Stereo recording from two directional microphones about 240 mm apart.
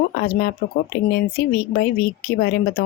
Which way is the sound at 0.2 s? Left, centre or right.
Left.